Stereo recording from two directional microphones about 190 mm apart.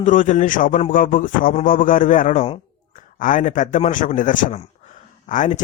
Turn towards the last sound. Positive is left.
turn(degrees=40)  # may be behind; listen again after turning